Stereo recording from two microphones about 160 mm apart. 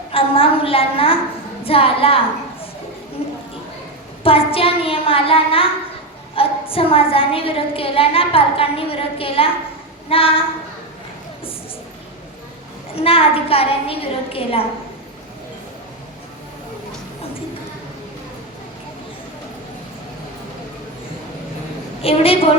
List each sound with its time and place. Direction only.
0.1 s a woman's voice: 35° left (ahead or behind)
3.2 s a sound: 35° left (ahead or behind)
4.2 s a child's voice: 35° left (ahead or behind)
13.0 s a woman's voice: 35° left (ahead or behind)
22.0 s a woman's voice: 35° left (ahead or behind)